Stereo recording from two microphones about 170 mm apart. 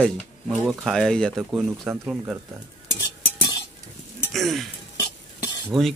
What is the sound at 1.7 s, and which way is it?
Speech, 10° right (ahead or behind).